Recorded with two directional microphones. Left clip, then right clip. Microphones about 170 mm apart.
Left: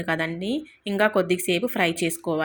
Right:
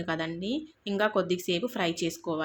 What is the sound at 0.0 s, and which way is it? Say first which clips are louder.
A woman's voice: left 6 dB; 15° left (ahead or behind).